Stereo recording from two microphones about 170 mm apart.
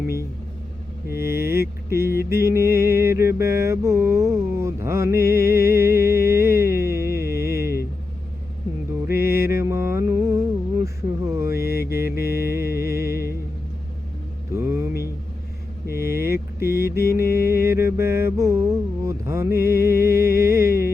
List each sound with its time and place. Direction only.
1.1 s speech: 15° right (ahead or behind)
1.9 s mantra: 15° right (ahead or behind)
9.0 s mantra: 15° right (ahead or behind)
12.4 s music: 15° right (ahead or behind)
14.5 s mantra: 15° right (ahead or behind)
15.9 s vehicle: 15° right (ahead or behind)
16.6 s mantra: 15° right (ahead or behind)
16.9 s music: 65° left (ahead or behind)
17.3 s mantra: 15° right (ahead or behind)